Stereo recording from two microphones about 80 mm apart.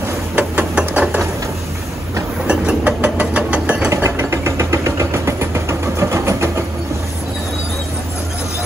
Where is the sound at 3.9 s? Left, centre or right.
Right.